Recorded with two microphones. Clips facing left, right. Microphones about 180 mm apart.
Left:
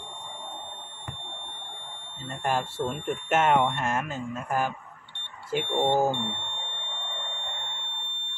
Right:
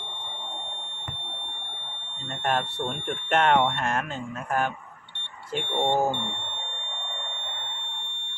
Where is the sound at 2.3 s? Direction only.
5° left (ahead or behind).